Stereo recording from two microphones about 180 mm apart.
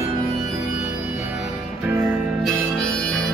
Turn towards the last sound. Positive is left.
turn(degrees=5)  # may be behind; listen again after turning